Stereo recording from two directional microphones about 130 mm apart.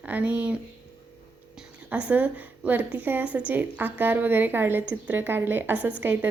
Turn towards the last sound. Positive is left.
turn(degrees=-15)  # may be behind; listen again after turning